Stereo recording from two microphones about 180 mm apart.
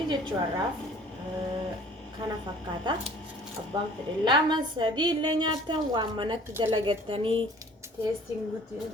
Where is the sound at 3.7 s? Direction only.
25° right (ahead or behind).